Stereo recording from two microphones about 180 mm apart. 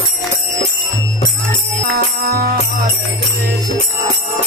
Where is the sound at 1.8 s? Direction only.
55° right (ahead or behind).